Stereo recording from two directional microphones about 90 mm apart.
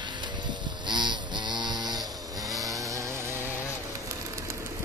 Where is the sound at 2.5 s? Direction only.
40° right (ahead or behind).